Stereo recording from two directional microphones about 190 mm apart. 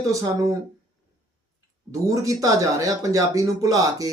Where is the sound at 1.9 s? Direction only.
15° right (ahead or behind).